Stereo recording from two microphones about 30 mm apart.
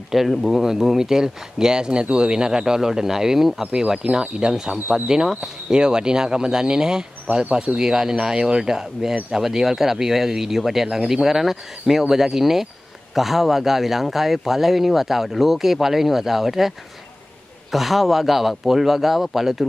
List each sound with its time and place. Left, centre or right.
0.1 s speech: centre
5.8 s speech: right; by 19.6 s centre